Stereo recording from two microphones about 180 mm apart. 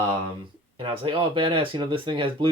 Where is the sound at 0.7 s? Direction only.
30° right (ahead or behind).